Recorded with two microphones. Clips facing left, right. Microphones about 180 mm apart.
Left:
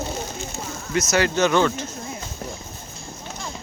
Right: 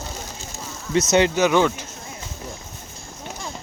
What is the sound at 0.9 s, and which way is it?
Speech, 25° right (ahead or behind).